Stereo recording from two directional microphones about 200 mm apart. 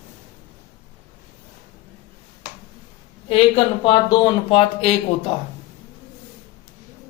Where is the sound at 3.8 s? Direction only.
25° left (ahead or behind).